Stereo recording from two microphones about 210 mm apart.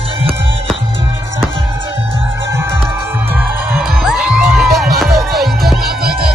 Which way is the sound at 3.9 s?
Centre (ahead or behind).